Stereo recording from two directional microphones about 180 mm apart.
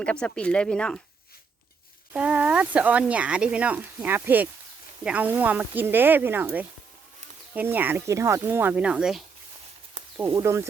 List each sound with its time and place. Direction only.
0.0 s speech: 5° left (ahead or behind)
2.1 s speech: 5° right (ahead or behind)
10.2 s speech: 20° right (ahead or behind)